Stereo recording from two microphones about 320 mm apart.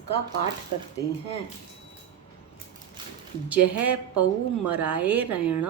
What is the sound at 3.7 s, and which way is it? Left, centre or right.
Speech, right.